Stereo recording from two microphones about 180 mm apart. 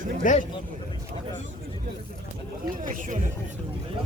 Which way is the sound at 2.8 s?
45° right (ahead or behind).